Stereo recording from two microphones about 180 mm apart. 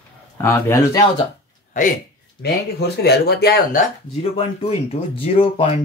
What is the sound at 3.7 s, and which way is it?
Speech, 35° left (ahead or behind).